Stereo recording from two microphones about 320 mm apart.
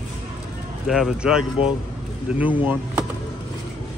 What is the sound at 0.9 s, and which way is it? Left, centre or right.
Speech, centre.